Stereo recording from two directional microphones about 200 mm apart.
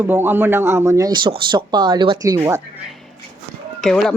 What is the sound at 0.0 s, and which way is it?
Speech, 10° right (ahead or behind).